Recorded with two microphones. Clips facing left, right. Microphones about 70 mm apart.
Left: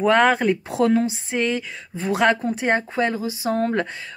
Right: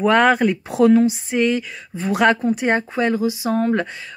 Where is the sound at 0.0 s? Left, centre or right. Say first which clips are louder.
Right 2 dB; left.